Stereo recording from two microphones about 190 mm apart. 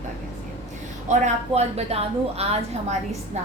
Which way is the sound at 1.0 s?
40° right (ahead or behind).